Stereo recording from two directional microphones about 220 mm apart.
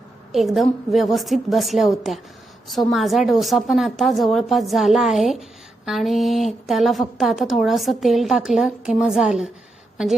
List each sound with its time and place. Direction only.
0.3 s a woman's voice: centre (ahead or behind)